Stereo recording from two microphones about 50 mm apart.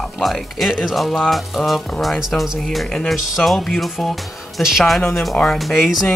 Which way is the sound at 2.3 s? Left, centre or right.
Left.